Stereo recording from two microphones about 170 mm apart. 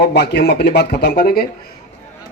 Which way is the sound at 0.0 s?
75° left (ahead or behind).